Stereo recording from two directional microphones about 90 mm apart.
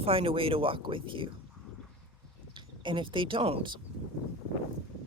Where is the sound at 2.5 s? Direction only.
65° right (ahead or behind).